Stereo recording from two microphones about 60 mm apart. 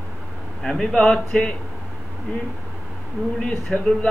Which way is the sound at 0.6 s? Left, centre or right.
Centre.